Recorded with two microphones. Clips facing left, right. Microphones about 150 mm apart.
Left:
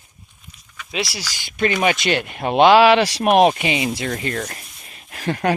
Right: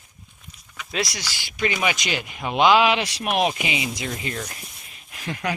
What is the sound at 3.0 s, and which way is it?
Speech, 35° left (ahead or behind).